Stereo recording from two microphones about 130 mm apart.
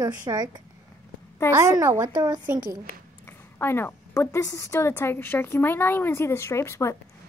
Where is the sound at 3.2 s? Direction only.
20° left (ahead or behind).